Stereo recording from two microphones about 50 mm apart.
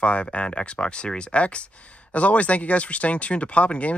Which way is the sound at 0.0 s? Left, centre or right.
Left.